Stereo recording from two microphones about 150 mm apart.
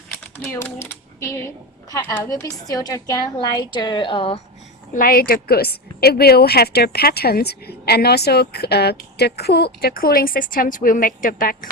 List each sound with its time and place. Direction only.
0.5 s speech: 15° left (ahead or behind)
1.9 s a woman's voice: 15° left (ahead or behind); by 4.4 s 35° left (ahead or behind)
4.9 s a woman's voice: 75° left (ahead or behind)